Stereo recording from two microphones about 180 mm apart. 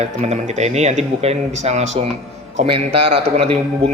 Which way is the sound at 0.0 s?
40° right (ahead or behind).